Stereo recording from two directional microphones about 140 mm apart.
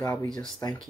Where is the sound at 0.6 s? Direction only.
20° left (ahead or behind).